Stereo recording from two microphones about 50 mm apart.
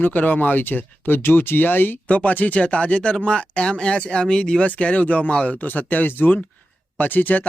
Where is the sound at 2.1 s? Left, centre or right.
Left.